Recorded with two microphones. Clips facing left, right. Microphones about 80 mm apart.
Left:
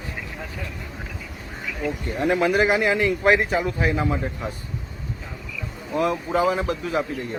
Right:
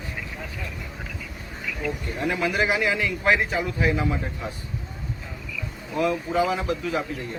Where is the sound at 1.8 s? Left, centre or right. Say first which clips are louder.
Left 5 dB; left.